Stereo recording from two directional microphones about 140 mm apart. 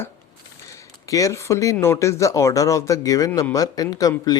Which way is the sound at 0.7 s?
25° left (ahead or behind).